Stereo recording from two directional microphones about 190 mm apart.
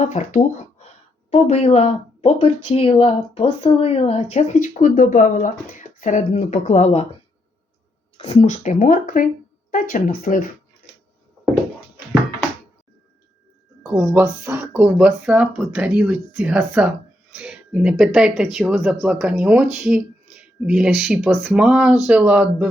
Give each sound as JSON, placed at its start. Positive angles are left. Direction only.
{"t": 0.0, "sound": "speech", "side_deg": 40}
{"t": 8.2, "sound": "speech", "side_deg": 35}
{"t": 13.9, "sound": "speech", "side_deg": -10}